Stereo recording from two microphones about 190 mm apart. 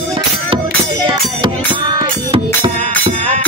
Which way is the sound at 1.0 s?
25° right (ahead or behind).